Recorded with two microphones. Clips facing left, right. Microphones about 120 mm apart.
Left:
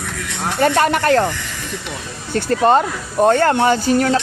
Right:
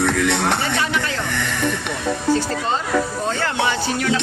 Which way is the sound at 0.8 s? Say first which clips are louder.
Left 9 dB; 55° left (ahead or behind).